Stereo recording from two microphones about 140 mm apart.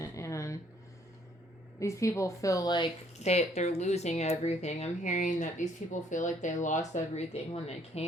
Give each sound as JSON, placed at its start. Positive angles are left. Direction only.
{"t": 0.0, "sound": "a sound", "side_deg": 20}
{"t": 1.8, "sound": "a woman's voice", "side_deg": 20}
{"t": 3.2, "sound": "speech", "side_deg": 50}